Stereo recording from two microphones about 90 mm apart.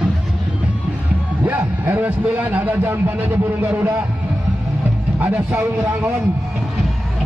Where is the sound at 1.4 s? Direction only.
20° right (ahead or behind).